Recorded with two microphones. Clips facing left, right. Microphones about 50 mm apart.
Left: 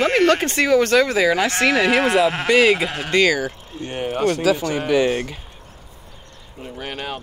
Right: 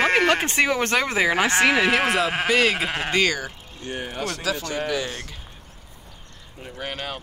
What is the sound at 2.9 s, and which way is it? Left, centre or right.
Speech, right.